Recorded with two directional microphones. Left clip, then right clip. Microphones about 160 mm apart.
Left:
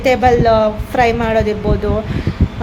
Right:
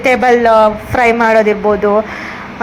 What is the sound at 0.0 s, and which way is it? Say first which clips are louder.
A woman's voice: right 2 dB; 5° left (ahead or behind).